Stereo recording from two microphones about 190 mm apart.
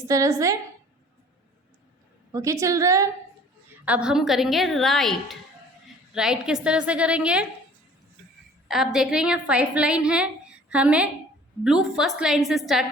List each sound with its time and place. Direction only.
0.1 s a woman's voice: 15° right (ahead or behind)
2.3 s a woman's voice: 15° right (ahead or behind)
3.8 s a woman's voice: 5° right (ahead or behind)
8.6 s a woman's voice: centre (ahead or behind)